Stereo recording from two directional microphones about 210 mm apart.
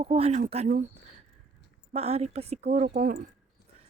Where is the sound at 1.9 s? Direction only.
30° right (ahead or behind).